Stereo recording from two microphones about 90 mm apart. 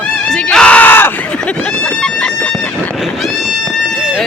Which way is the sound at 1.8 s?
10° left (ahead or behind).